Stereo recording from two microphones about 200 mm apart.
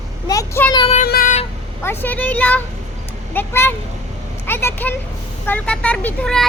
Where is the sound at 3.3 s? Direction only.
10° left (ahead or behind).